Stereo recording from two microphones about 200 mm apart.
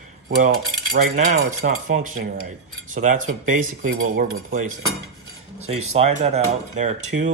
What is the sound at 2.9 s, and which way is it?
Speech, 40° right (ahead or behind).